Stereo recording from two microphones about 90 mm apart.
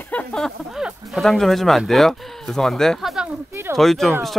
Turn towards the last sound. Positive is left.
turn(degrees=0)  # may be behind; listen again after turning